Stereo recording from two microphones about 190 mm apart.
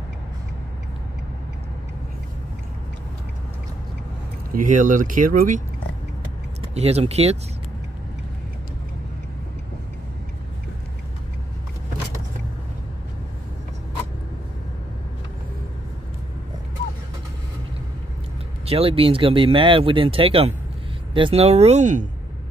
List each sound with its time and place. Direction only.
4.5 s speech: 45° right (ahead or behind)
6.7 s speech: 35° right (ahead or behind)
18.7 s speech: 30° right (ahead or behind)